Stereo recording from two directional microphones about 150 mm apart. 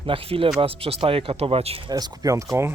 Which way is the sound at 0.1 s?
35° right (ahead or behind).